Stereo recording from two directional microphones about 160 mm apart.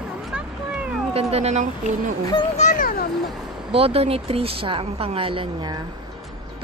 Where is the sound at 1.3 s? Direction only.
45° right (ahead or behind).